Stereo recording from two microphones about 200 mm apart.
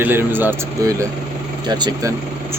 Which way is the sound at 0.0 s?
10° right (ahead or behind).